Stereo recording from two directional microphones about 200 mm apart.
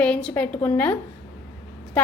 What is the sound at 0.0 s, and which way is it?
Speech, 5° left (ahead or behind).